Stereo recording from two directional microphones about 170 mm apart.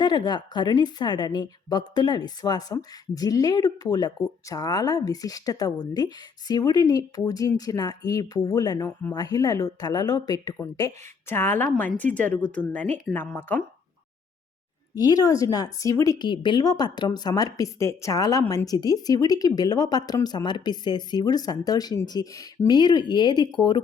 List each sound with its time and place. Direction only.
0.0 s a woman's voice: 25° left (ahead or behind)
14.9 s a woman's voice: 20° left (ahead or behind)